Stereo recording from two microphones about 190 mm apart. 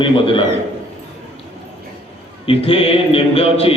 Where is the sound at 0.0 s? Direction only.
25° left (ahead or behind).